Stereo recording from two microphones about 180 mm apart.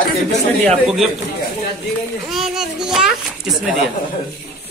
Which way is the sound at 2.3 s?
Centre (ahead or behind).